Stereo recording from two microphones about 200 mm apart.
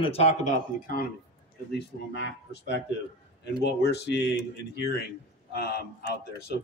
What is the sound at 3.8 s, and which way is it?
Speech, 55° left (ahead or behind).